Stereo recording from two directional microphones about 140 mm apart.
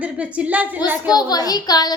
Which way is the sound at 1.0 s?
30° left (ahead or behind).